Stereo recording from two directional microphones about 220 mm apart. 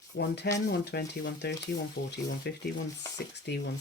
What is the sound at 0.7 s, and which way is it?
Speech, 50° left (ahead or behind).